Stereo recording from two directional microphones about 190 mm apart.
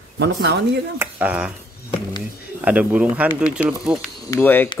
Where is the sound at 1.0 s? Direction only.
5° right (ahead or behind).